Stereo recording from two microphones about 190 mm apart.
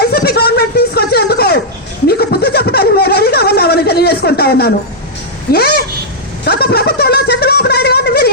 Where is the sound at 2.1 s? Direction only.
55° left (ahead or behind).